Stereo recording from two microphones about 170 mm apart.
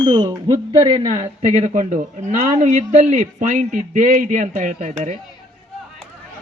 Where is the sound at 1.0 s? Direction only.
45° right (ahead or behind).